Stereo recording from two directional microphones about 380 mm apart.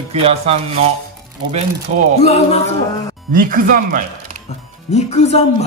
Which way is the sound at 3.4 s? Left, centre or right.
Right.